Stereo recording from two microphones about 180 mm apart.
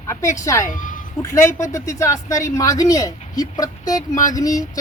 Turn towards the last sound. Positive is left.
turn(degrees=20)  # may be behind; listen again after turning